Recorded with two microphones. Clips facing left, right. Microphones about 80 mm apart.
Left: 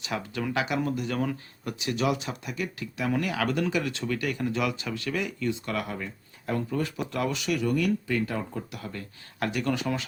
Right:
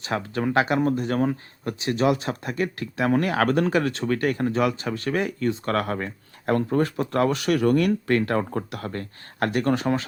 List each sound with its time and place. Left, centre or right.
0.0 s speech: right